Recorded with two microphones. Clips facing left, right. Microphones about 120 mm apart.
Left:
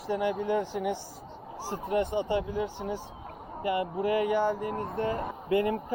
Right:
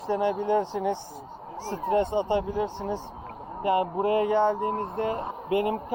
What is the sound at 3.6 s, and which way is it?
Speech, 25° right (ahead or behind).